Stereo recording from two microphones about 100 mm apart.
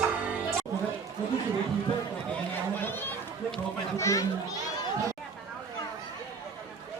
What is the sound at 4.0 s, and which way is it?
Children playing, 30° left (ahead or behind).